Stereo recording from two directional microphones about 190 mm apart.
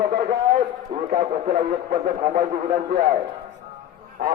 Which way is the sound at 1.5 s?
45° right (ahead or behind).